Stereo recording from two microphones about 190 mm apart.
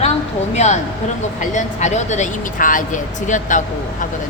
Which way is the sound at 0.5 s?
35° left (ahead or behind).